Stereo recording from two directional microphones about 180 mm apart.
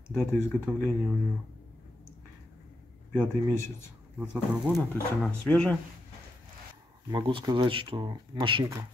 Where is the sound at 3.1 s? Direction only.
15° left (ahead or behind).